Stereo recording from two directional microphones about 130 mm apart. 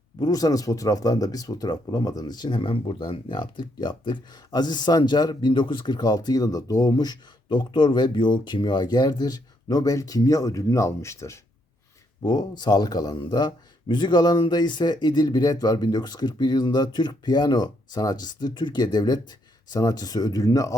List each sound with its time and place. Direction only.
0.2 s speech: 30° left (ahead or behind)